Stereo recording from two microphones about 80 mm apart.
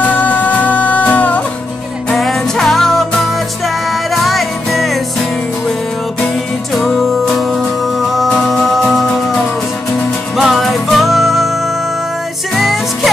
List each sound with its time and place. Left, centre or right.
0.0 s music: centre
2.0 s music: centre
6.7 s music: centre
10.3 s music: centre